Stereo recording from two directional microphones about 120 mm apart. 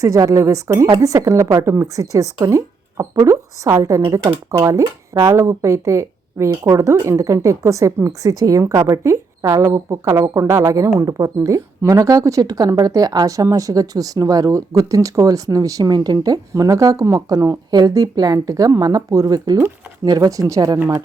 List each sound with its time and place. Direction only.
0.0 s speech: 25° right (ahead or behind)